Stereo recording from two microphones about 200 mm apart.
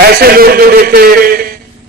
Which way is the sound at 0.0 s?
50° right (ahead or behind).